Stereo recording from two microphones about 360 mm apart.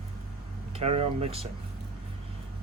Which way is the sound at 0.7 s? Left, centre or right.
Centre.